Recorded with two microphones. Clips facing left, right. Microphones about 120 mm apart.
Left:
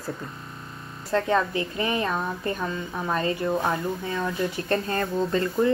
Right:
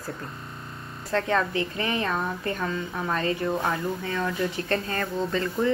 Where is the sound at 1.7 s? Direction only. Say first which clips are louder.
Left 2 dB; 25° left (ahead or behind).